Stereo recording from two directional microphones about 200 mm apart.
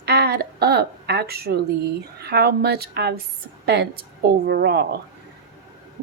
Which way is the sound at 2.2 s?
55° right (ahead or behind).